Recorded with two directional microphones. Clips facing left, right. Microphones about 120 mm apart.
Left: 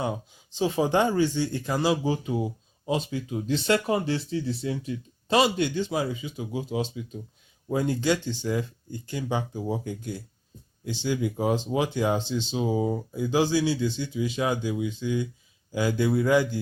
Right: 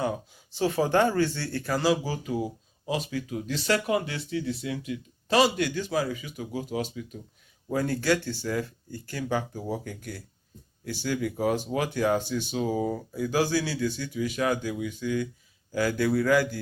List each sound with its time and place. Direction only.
0.0 s speech: 20° left (ahead or behind)